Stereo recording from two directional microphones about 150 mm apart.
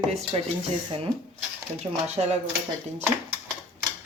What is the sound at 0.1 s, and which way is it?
Speech, 45° right (ahead or behind).